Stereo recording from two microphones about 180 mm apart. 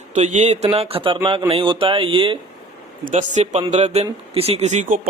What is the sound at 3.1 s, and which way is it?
Speech, 40° right (ahead or behind).